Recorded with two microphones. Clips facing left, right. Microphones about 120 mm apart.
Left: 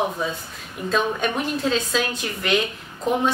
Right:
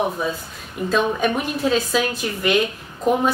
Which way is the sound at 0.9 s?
5° right (ahead or behind).